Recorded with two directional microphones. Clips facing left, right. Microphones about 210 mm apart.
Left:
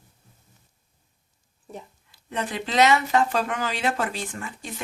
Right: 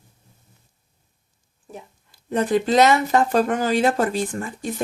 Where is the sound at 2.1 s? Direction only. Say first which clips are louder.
Right 10 dB; 45° right (ahead or behind).